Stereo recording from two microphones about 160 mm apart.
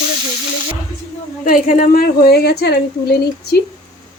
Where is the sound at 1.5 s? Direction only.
55° left (ahead or behind); by 3.6 s 90° left.